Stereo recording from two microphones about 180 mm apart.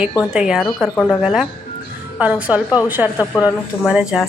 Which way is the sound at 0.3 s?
5° right (ahead or behind).